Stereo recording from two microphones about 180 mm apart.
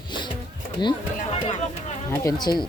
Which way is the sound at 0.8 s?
25° left (ahead or behind).